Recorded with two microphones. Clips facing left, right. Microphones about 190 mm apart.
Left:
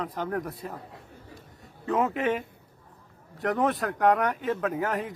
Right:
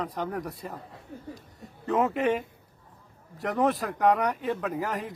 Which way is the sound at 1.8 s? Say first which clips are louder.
Right 1 dB; centre (ahead or behind).